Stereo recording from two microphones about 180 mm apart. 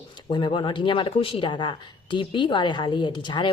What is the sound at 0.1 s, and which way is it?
Speech, 25° left (ahead or behind).